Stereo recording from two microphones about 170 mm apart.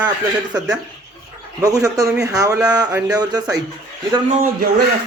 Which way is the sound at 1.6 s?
20° right (ahead or behind).